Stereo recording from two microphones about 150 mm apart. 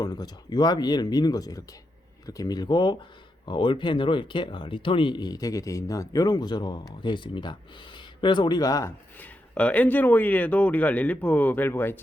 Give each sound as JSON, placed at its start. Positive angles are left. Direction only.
{"t": 0.0, "sound": "speech", "side_deg": 25}
{"t": 9.1, "sound": "speech", "side_deg": 10}